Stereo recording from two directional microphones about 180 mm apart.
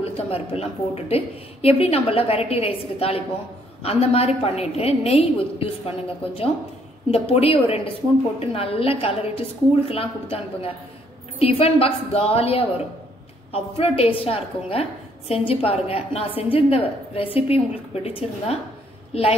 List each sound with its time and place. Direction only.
0.0 s a woman's voice: 35° left (ahead or behind)